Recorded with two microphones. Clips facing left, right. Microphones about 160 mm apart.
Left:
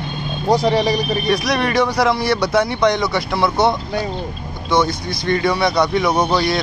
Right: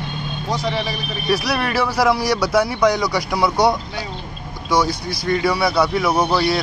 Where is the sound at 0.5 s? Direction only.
40° left (ahead or behind).